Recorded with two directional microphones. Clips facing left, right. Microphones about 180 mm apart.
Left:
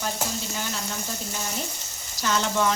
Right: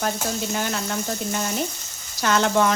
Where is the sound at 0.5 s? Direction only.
65° right (ahead or behind).